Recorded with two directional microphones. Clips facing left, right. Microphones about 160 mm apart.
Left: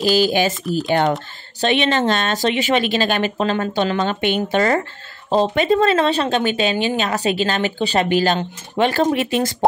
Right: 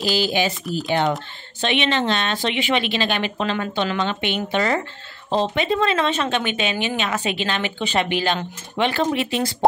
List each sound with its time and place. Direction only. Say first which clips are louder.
0.1 s a woman's voice: left 4 dB; 45° left (ahead or behind)